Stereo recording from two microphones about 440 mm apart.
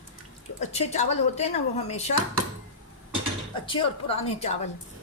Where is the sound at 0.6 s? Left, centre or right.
Centre.